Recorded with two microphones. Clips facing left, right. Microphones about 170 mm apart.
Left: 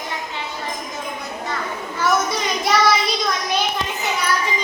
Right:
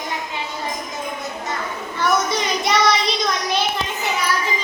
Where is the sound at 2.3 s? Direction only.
Centre (ahead or behind).